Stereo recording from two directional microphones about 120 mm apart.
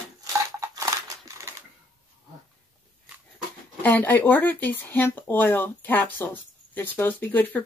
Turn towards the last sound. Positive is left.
turn(degrees=15)  # may be behind; listen again after turning